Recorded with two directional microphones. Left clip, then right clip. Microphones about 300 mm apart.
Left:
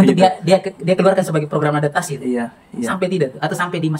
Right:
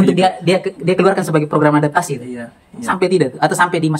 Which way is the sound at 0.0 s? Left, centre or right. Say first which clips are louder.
Even; centre.